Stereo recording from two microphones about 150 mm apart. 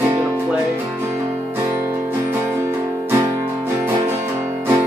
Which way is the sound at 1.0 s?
15° right (ahead or behind).